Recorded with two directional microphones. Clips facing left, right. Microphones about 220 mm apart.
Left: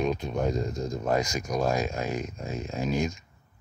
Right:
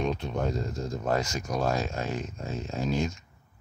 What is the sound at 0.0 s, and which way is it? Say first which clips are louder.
Speech: left 2 dB; 10° left (ahead or behind).